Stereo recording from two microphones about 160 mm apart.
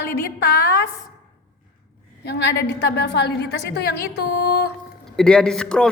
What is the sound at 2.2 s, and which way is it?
A woman's voice, 90° left.